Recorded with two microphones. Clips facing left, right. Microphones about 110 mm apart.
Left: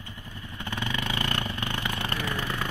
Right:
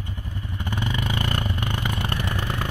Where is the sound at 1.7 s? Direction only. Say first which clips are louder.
Right 3 dB; 25° right (ahead or behind).